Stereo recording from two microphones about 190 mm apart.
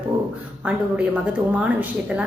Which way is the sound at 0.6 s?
5° right (ahead or behind).